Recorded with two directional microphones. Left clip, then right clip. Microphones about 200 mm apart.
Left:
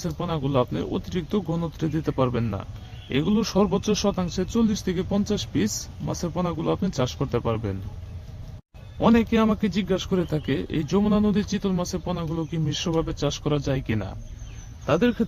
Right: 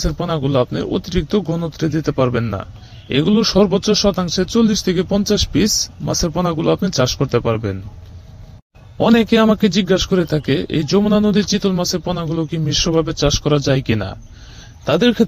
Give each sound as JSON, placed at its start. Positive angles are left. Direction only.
{"t": 0.0, "sound": "a man's voice", "side_deg": -25}
{"t": 9.0, "sound": "a man's voice", "side_deg": -40}